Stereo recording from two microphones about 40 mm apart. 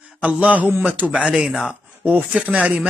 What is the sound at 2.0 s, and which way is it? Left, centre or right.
Speech, right.